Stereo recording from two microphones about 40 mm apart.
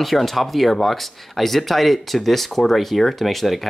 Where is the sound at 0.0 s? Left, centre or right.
Centre.